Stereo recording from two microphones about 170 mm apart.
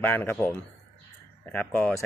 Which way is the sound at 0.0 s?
10° left (ahead or behind).